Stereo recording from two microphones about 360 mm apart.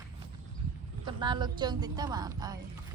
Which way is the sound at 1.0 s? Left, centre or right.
Centre.